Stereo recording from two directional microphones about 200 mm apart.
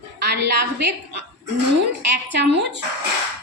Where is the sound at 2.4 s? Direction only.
60° right (ahead or behind).